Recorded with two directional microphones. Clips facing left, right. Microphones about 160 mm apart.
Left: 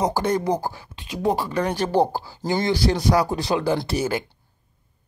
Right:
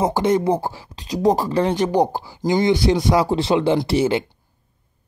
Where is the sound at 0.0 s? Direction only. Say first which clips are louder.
Right 4 dB; 20° right (ahead or behind); by 1.6 s 40° right (ahead or behind).